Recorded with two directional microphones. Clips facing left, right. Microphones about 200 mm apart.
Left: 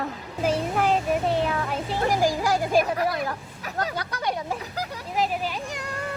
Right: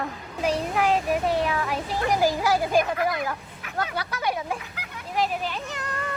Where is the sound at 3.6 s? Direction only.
40° left (ahead or behind).